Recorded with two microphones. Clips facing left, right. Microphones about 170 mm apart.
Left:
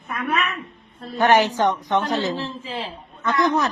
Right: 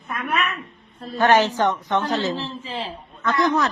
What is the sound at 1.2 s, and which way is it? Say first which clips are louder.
A man's voice: even; 15° left (ahead or behind).